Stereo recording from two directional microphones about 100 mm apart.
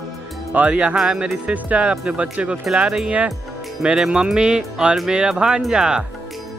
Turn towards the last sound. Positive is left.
turn(degrees=-5)  # may be behind; listen again after turning